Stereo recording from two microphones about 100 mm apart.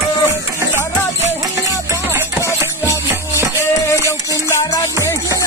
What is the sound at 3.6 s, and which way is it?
Music, 30° left (ahead or behind).